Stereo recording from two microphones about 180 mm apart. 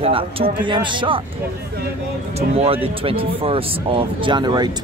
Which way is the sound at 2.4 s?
35° right (ahead or behind).